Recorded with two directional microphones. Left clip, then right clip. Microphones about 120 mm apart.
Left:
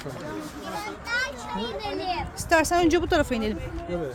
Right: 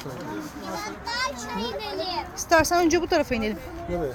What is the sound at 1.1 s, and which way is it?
Speech, 85° right.